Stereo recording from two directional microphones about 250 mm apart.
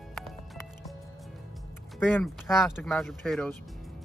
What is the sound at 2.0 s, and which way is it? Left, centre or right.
Speech, centre.